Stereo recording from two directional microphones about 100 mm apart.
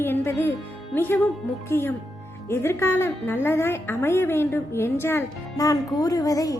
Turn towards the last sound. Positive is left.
turn(degrees=35)  # may be behind; listen again after turning